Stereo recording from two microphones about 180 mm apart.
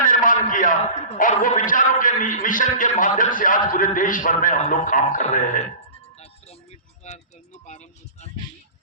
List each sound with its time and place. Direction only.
0.0 s a man's voice: 50° left (ahead or behind)
6.1 s music: 35° left (ahead or behind)